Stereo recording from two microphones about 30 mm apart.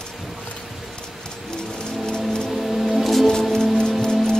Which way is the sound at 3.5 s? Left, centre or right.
Centre.